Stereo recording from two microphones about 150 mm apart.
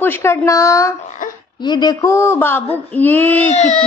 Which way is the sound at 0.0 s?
15° left (ahead or behind).